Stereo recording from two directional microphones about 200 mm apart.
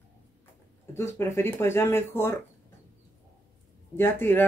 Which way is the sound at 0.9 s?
15° left (ahead or behind).